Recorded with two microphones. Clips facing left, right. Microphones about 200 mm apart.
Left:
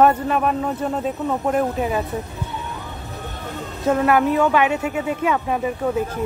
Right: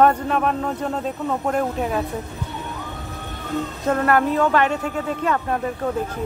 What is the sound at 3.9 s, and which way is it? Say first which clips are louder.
Speech: left 2 dB; 5° left (ahead or behind).